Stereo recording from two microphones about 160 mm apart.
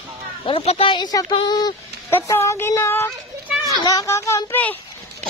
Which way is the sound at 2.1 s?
20° left (ahead or behind).